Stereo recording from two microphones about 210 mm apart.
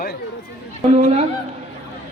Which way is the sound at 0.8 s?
30° right (ahead or behind).